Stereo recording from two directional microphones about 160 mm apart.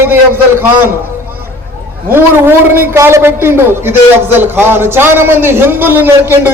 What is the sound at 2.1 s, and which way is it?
Speech, 15° right (ahead or behind).